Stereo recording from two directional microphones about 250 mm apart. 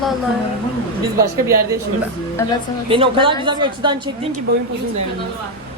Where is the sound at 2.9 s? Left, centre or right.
Right.